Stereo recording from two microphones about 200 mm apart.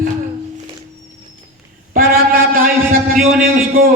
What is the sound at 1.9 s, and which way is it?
A man's voice, 45° right (ahead or behind).